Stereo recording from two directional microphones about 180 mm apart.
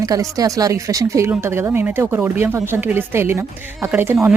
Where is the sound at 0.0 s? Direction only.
20° right (ahead or behind).